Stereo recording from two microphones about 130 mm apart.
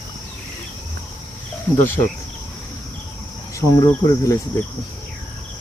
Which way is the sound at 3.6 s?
25° left (ahead or behind).